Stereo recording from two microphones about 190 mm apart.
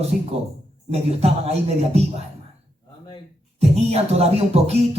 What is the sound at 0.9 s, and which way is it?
Speech, 35° right (ahead or behind).